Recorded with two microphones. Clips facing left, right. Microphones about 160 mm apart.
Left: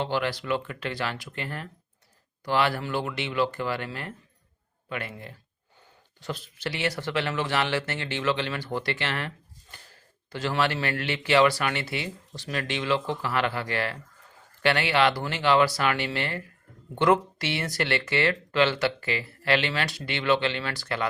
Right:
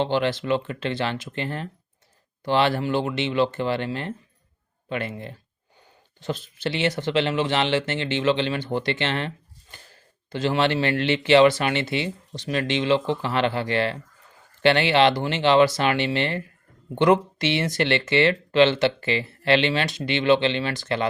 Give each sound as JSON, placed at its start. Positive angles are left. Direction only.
{"t": 0.0, "sound": "speech", "side_deg": -25}
{"t": 10.3, "sound": "speech", "side_deg": -20}